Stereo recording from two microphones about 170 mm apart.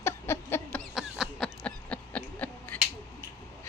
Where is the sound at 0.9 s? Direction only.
Centre (ahead or behind).